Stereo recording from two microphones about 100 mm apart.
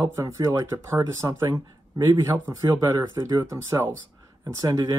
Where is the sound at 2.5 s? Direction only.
30° right (ahead or behind).